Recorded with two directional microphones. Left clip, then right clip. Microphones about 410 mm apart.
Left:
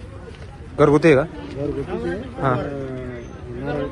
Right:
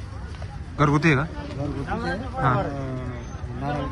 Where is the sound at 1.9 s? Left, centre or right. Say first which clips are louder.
Left 2 dB; centre.